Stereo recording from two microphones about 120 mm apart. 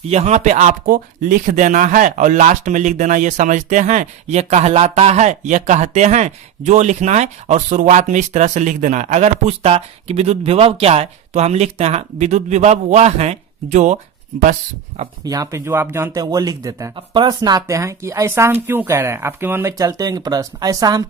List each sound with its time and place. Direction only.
0.1 s speech: 65° right (ahead or behind); by 14.5 s 85° right
15.2 s speech: 30° right (ahead or behind)
16.2 s speech: 30° right (ahead or behind)
19.7 s speech: 30° right (ahead or behind)